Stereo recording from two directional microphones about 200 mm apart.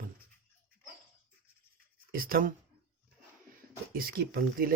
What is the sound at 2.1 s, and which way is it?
Speech, 45° right (ahead or behind).